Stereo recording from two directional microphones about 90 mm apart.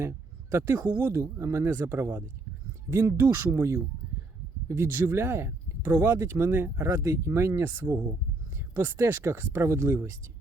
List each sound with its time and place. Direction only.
0.5 s speech: 25° right (ahead or behind)